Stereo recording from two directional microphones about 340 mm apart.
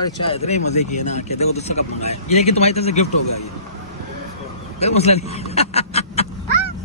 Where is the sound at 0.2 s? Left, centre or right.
Centre.